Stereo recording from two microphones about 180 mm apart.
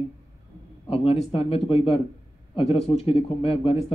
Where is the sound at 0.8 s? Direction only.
30° left (ahead or behind).